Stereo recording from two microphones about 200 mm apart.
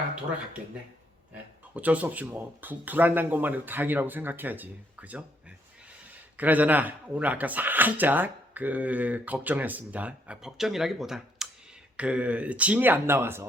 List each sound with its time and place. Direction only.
1.3 s speech: 5° right (ahead or behind)